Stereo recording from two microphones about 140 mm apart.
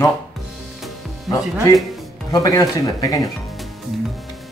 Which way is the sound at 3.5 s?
Centre (ahead or behind).